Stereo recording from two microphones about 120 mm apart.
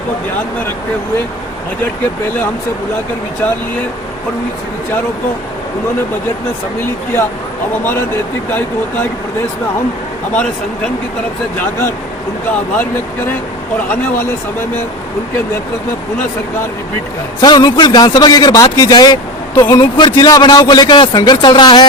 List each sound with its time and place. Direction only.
11.6 s speech: 20° left (ahead or behind)
13.9 s speech: 20° left (ahead or behind)
17.4 s a man's voice: 35° left (ahead or behind)